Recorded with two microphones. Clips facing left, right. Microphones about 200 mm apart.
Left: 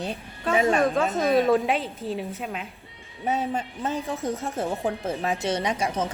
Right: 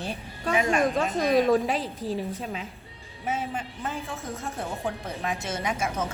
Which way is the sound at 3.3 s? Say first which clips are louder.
Left 4 dB; 40° left (ahead or behind).